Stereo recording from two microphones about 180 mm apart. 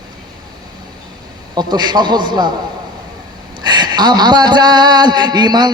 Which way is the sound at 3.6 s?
25° right (ahead or behind).